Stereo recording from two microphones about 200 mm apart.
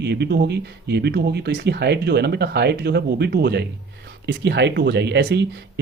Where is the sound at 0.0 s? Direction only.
55° right (ahead or behind).